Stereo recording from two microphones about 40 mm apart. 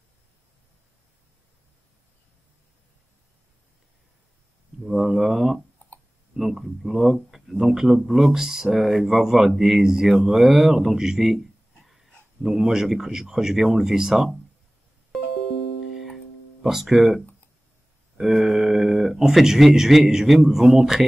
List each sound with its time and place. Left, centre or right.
4.8 s speech: centre
5.8 s a sound: left
6.3 s speech: centre
11.3 s a sound: centre
12.4 s speech: centre
16.6 s speech: centre